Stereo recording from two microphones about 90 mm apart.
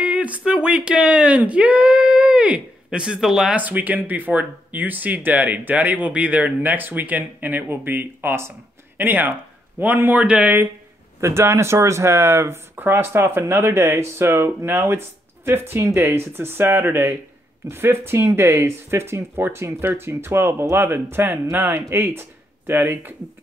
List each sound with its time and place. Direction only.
0.0 s speech: 15° right (ahead or behind)
3.5 s speech: 20° right (ahead or behind)
11.1 s speech: 30° right (ahead or behind)